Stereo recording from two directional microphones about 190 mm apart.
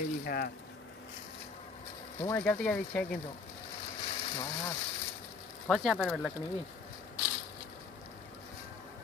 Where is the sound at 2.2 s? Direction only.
10° left (ahead or behind).